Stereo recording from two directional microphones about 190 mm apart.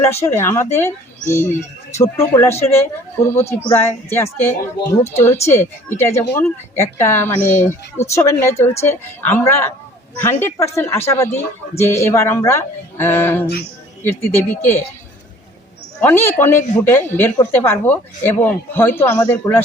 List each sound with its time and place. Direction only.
0.1 s speech: 15° left (ahead or behind)
16.0 s speech: 10° left (ahead or behind)